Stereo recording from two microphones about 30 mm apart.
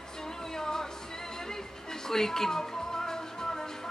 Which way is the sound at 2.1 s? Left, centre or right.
Centre.